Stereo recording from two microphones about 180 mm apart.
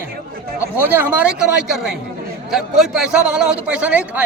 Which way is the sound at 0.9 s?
10° right (ahead or behind).